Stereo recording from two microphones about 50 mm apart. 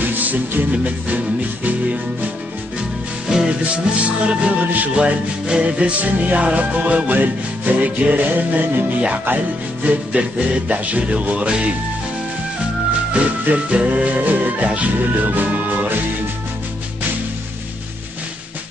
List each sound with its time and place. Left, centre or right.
0.0 s music: right
3.3 s music: centre
3.6 s music: right
13.1 s music: right